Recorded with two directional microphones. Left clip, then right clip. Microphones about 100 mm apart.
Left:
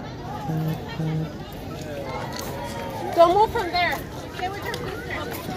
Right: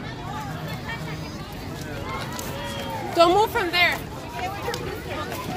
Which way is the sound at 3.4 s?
20° right (ahead or behind).